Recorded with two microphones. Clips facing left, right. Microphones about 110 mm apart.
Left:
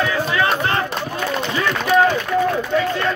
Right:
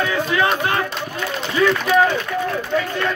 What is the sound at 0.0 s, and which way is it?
Music, 15° right (ahead or behind).